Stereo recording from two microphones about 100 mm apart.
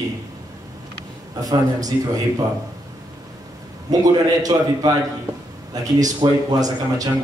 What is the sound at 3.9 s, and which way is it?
Speech, 40° right (ahead or behind).